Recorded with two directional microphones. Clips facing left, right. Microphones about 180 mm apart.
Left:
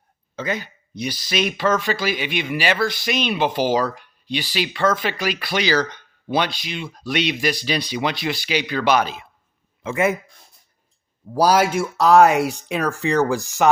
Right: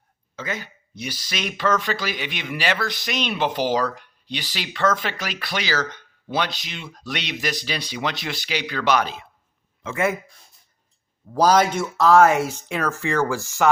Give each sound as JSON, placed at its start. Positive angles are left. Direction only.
{"t": 0.3, "sound": "speech", "side_deg": 20}
{"t": 5.5, "sound": "speech", "side_deg": 20}
{"t": 11.3, "sound": "speech", "side_deg": 10}